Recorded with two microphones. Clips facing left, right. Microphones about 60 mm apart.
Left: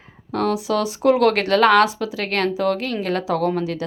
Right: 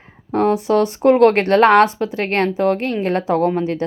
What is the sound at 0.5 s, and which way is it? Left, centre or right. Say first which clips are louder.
Speech: right 5 dB; right.